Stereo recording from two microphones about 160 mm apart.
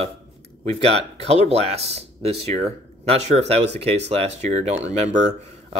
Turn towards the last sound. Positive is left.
turn(degrees=-45)  # may be behind; listen again after turning